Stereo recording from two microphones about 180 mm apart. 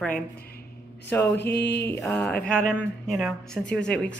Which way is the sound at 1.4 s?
70° left (ahead or behind).